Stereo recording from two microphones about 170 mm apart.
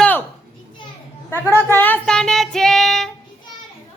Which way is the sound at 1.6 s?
10° left (ahead or behind).